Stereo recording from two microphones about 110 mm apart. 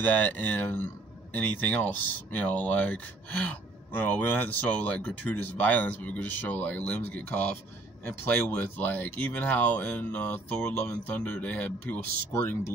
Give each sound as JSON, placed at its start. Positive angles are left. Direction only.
{"t": 0.0, "sound": "speech", "side_deg": 15}